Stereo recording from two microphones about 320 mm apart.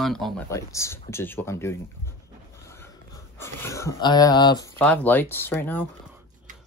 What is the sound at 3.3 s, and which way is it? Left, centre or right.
Speech, centre.